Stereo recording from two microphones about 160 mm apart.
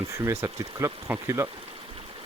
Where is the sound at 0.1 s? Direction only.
20° right (ahead or behind).